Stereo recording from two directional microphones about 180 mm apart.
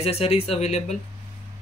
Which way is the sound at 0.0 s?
35° left (ahead or behind).